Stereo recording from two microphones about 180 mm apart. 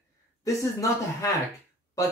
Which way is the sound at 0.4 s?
20° left (ahead or behind).